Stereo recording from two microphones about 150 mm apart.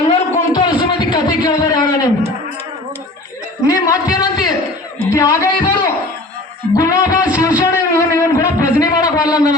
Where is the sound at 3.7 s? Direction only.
25° left (ahead or behind).